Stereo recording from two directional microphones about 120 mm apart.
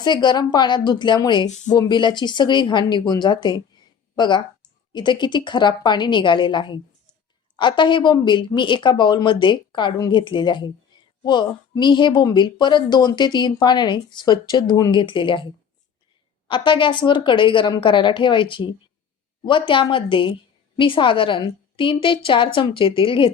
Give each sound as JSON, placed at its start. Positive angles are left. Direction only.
{"t": 0.0, "sound": "a woman's voice", "side_deg": 40}
{"t": 1.5, "sound": "speech", "side_deg": 75}
{"t": 1.7, "sound": "a woman's voice", "side_deg": 40}
{"t": 16.5, "sound": "a woman's voice", "side_deg": 45}